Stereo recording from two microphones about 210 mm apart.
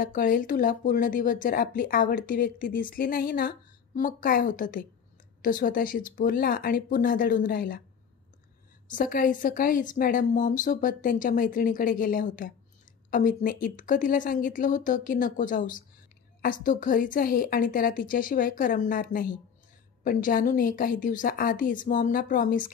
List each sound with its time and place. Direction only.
0.0 s speech: 40° left (ahead or behind)
8.8 s speech: 40° left (ahead or behind)